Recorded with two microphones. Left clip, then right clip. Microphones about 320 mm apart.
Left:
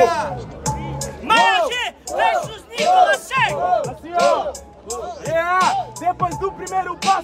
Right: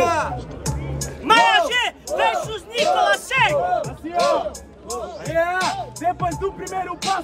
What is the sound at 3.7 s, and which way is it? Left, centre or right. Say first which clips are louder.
Music: left 2 dB; left.